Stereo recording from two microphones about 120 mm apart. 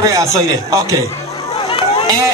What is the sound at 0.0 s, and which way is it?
Speech, 25° right (ahead or behind).